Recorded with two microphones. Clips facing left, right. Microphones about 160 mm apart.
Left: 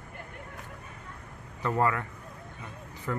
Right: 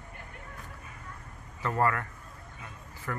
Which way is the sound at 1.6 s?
15° left (ahead or behind).